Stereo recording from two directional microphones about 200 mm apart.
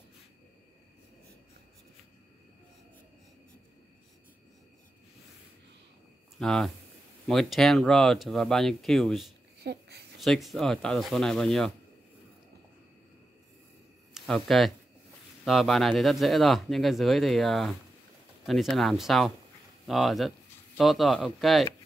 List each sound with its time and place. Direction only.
6.4 s speech: centre (ahead or behind)
9.6 s a sound: 55° right (ahead or behind)
10.2 s speech: centre (ahead or behind)
14.1 s speech: centre (ahead or behind)